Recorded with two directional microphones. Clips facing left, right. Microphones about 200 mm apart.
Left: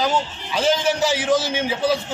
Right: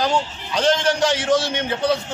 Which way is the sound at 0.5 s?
5° left (ahead or behind).